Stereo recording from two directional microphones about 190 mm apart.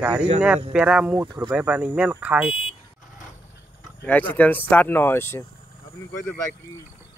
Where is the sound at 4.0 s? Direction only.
10° left (ahead or behind).